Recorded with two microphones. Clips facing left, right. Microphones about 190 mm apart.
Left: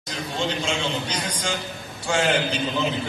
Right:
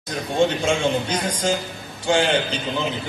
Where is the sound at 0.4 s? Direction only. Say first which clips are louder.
Right 7 dB; 50° right (ahead or behind).